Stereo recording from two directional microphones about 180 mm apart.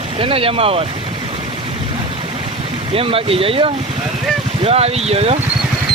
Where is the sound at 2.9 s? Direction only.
30° right (ahead or behind).